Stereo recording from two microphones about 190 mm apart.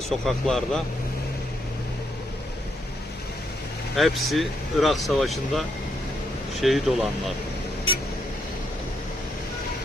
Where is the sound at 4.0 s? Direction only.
Centre (ahead or behind).